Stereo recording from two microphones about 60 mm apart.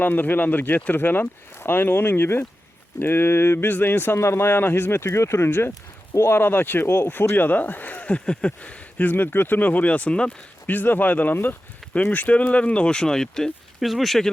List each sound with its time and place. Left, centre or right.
0.0 s speech: left
4.2 s speech: left; by 8.7 s centre
9.0 s speech: left; by 10.3 s centre
10.7 s speech: left; by 14.3 s centre